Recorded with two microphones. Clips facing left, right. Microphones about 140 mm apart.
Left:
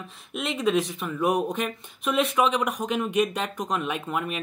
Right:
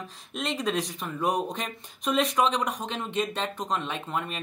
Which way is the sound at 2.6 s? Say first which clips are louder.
Left 3 dB; 30° right (ahead or behind).